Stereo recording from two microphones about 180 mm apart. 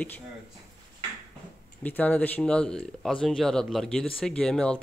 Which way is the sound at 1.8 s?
10° left (ahead or behind).